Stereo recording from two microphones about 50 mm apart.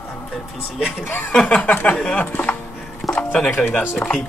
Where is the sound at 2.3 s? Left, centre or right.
Left.